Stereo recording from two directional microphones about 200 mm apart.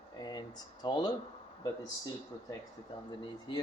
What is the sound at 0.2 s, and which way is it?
Speech, 20° left (ahead or behind).